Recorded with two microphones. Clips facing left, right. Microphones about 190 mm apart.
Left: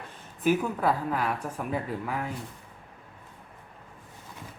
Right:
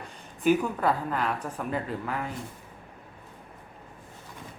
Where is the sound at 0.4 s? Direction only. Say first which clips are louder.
Right 1 dB; 5° left (ahead or behind).